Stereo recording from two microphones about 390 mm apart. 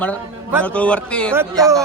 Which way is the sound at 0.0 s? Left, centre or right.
Centre.